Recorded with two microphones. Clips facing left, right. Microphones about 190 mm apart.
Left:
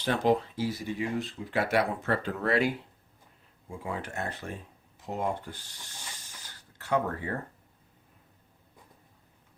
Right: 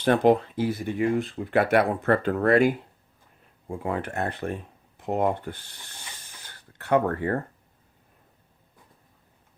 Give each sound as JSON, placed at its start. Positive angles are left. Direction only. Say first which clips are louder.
{"t": 0.0, "sound": "speech", "louder": "right 6 dB", "side_deg": -55}